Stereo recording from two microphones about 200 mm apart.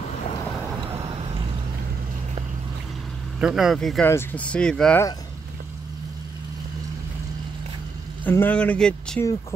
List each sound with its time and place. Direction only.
0.9 s vehicle: 30° right (ahead or behind)
3.3 s speech: 5° right (ahead or behind)
8.2 s speech: 10° left (ahead or behind)